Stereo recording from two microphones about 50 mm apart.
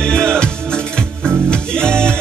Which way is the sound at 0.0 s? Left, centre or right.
Centre.